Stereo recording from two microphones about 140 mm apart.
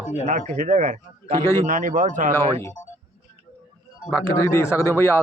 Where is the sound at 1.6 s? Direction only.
65° right (ahead or behind).